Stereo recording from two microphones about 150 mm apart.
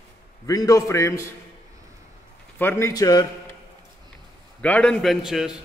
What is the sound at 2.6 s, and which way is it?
Speech, 15° left (ahead or behind).